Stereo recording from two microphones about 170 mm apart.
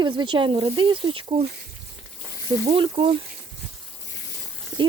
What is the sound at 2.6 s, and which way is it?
Speech, 35° right (ahead or behind).